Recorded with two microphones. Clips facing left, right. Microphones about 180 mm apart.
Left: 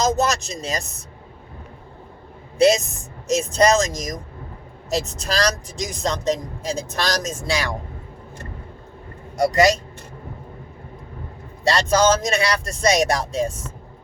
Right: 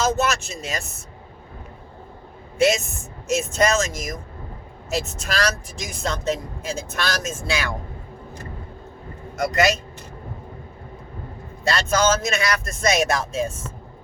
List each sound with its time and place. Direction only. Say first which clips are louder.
0.2 s speech: left 2 dB; 40° left (ahead or behind)
2.6 s speech: left 3 dB; 35° left (ahead or behind)
9.4 s speech: left 4 dB; 30° left (ahead or behind)
11.6 s speech: left 3 dB; 35° left (ahead or behind)